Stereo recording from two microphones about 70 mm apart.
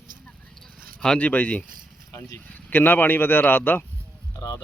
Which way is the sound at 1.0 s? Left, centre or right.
Centre.